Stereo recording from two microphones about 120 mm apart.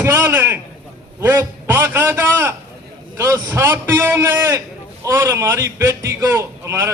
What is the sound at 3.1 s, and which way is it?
A man's voice, 20° right (ahead or behind).